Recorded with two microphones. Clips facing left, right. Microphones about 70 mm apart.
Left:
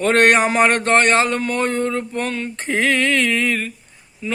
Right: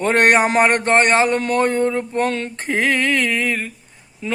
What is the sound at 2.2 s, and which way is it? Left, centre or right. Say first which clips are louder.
Speech: right 4 dB; right.